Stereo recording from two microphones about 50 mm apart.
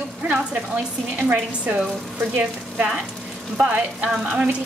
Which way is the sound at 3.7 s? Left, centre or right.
Right.